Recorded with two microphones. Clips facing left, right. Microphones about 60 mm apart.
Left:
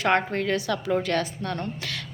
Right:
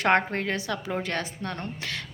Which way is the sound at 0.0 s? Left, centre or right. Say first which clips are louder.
Even; right.